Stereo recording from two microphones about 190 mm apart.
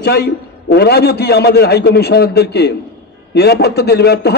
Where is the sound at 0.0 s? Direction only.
60° left (ahead or behind).